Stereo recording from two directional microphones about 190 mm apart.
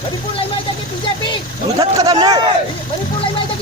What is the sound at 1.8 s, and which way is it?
Speech, 20° right (ahead or behind).